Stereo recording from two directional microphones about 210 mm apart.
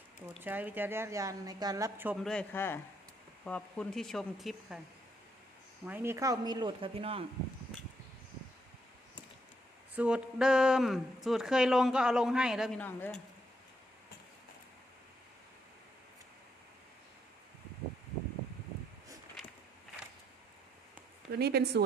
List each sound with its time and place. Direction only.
0.4 s a woman's voice: 10° right (ahead or behind)
2.2 s speech: 5° left (ahead or behind)
5.8 s speech: 10° right (ahead or behind); by 7.3 s 25° right (ahead or behind)
9.9 s speech: 5° right (ahead or behind)
21.3 s a woman's voice: 50° right (ahead or behind)